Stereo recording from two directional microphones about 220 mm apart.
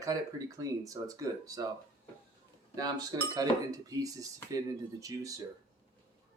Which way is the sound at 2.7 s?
15° right (ahead or behind).